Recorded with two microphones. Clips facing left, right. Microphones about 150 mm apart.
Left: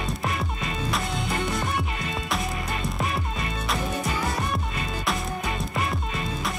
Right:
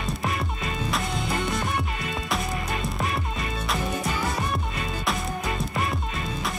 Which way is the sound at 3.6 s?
Centre (ahead or behind).